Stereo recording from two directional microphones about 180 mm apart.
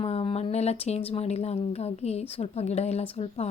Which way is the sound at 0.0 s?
30° left (ahead or behind).